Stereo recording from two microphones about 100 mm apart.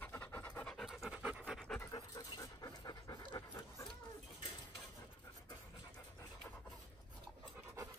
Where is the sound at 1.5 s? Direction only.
10° left (ahead or behind).